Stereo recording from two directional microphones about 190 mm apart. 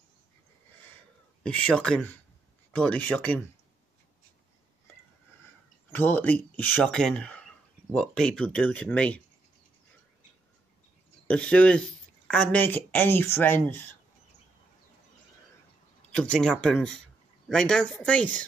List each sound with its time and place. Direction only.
1.4 s speech: 5° left (ahead or behind)
5.9 s speech: 10° left (ahead or behind)
11.2 s speech: 5° left (ahead or behind)
16.2 s speech: 5° left (ahead or behind)